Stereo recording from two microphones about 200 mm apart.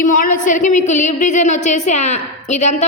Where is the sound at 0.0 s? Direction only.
40° left (ahead or behind).